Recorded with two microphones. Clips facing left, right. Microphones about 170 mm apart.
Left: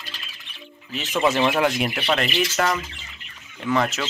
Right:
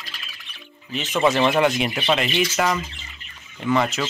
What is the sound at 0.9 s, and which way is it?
Speech, centre (ahead or behind).